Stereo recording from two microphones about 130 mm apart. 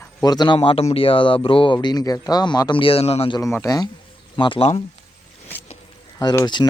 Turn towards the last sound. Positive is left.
turn(degrees=30)  # may be behind; listen again after turning